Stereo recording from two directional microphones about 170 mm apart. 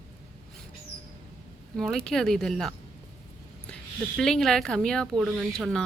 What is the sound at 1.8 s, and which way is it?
Speech, 5° left (ahead or behind).